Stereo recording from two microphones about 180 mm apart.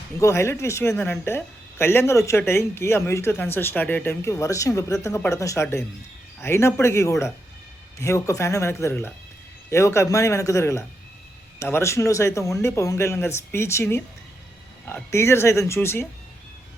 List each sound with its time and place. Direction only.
0.2 s a woman's voice: 15° left (ahead or behind)